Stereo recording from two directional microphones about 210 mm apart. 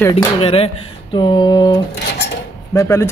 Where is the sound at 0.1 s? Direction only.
25° left (ahead or behind).